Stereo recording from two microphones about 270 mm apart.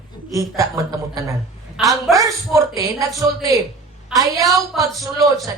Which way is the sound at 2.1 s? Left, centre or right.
Centre.